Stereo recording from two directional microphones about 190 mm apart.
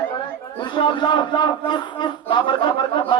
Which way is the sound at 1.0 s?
25° left (ahead or behind).